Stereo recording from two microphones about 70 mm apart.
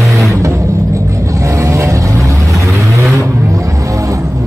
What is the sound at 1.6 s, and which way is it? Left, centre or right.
Vehicle, right.